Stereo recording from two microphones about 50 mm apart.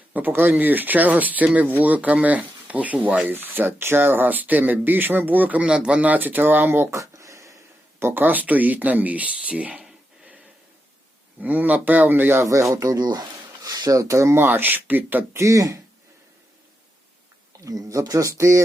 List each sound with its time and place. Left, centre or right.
0.1 s speech: right
3.3 s speech: right
5.6 s speech: centre
6.1 s speech: right
6.9 s a sound: right
7.9 s speech: right
8.2 s speech: right
11.3 s speech: right
12.4 s speech: right
14.0 s speech: right
14.3 s speech: right
15.3 s speech: right
17.6 s speech: right